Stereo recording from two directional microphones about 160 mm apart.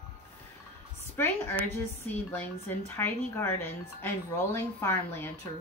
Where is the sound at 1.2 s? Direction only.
15° left (ahead or behind).